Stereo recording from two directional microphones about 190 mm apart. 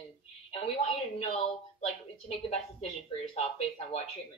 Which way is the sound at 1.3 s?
35° left (ahead or behind).